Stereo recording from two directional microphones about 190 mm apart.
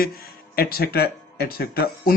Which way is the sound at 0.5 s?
55° left (ahead or behind).